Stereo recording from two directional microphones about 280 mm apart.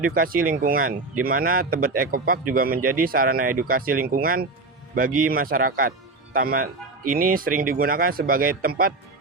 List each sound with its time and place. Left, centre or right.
0.0 s speech: right